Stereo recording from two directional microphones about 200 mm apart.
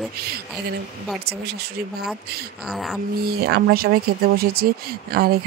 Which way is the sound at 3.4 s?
50° right (ahead or behind).